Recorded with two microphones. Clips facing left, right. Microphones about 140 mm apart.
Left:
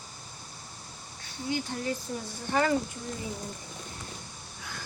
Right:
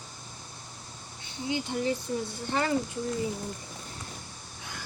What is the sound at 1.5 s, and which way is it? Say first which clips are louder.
Speech: right 2 dB; 20° right (ahead or behind).